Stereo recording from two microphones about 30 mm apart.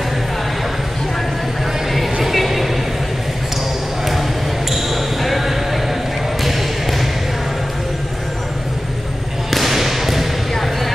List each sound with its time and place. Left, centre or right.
2.3 s vehicle: centre
4.6 s basketball bounce: centre
9.5 s whip: centre